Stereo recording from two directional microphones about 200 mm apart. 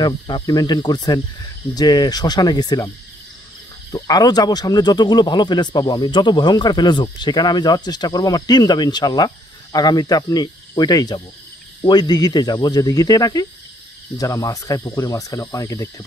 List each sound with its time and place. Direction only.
0.0 s speech: 20° left (ahead or behind)
3.9 s speech: 20° left (ahead or behind)